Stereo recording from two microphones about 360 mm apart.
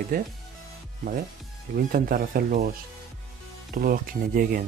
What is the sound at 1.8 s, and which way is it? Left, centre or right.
Speech, right.